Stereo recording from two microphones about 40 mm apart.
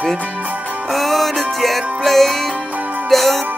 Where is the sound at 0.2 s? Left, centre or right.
Right.